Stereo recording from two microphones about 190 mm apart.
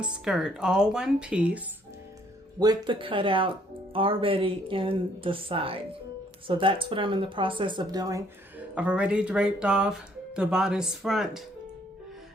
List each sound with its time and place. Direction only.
0.0 s speech: 5° right (ahead or behind)
2.6 s speech: 20° right (ahead or behind)
8.5 s speech: 5° right (ahead or behind)